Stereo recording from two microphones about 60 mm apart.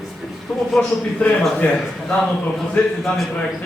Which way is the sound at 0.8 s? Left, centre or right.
Left.